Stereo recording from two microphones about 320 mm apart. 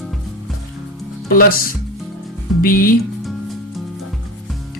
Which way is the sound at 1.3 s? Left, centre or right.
Left.